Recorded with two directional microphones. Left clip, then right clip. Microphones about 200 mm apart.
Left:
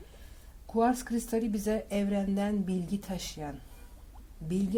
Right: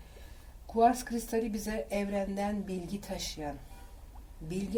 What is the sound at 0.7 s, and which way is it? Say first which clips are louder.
Speech: right 2 dB; 45° left (ahead or behind).